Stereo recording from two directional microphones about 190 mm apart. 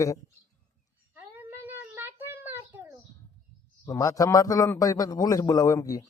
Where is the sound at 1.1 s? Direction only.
10° right (ahead or behind).